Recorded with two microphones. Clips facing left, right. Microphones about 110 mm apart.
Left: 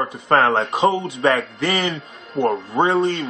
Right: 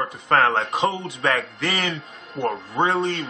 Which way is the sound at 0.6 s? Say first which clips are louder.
Left 5 dB; 5° left (ahead or behind).